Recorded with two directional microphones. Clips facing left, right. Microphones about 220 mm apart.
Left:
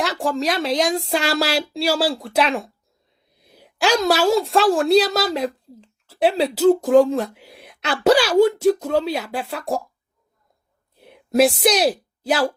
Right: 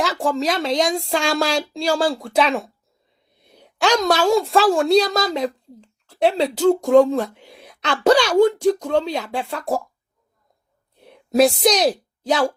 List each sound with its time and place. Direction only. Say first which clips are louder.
0.0 s a woman's voice: right 1 dB; centre (ahead or behind)
10.9 s a sound: even; centre (ahead or behind)
11.6 s a woman's voice: even; 5° left (ahead or behind)